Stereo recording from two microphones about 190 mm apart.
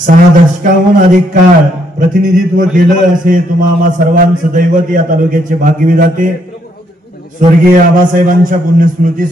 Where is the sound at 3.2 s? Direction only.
45° right (ahead or behind).